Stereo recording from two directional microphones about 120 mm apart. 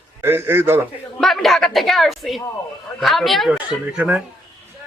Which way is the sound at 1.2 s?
Centre (ahead or behind).